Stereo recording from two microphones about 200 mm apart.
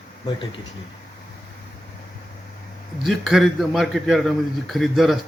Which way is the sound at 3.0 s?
Centre (ahead or behind).